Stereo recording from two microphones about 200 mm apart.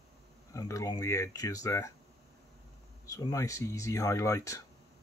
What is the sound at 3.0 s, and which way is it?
Speech, 15° left (ahead or behind).